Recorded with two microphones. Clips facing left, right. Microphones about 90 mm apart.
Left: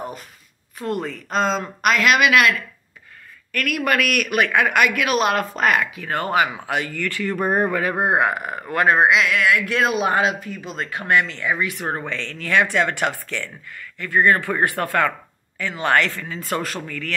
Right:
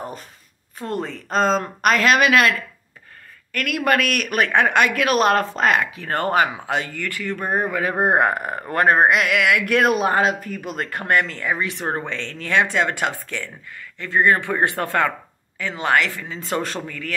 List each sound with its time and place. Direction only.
0.7 s speech: 35° right (ahead or behind)
3.5 s speech: 25° right (ahead or behind)
6.0 s speech: 40° right (ahead or behind)
6.5 s speech: 25° right (ahead or behind)
7.2 s speech: 5° left (ahead or behind)
8.0 s speech: 45° right (ahead or behind)
9.3 s speech: 70° right (ahead or behind)
9.9 s speech: 40° right (ahead or behind)
11.5 s speech: 30° right (ahead or behind); by 16.3 s 15° right (ahead or behind)
16.3 s speech: 25° right (ahead or behind)